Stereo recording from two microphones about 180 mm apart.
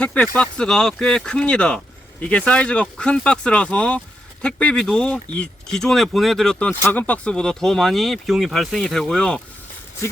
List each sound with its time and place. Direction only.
0.0 s speech: 5° left (ahead or behind)